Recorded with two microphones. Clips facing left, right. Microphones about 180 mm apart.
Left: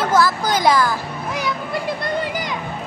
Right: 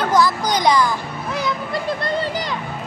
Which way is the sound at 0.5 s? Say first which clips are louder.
Even; 5° left (ahead or behind).